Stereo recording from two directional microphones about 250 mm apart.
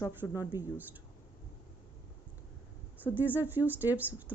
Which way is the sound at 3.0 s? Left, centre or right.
Centre.